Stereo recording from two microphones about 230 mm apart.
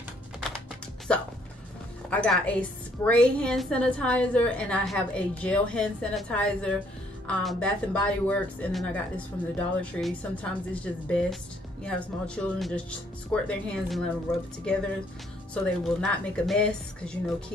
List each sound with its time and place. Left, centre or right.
1.1 s a woman's voice: centre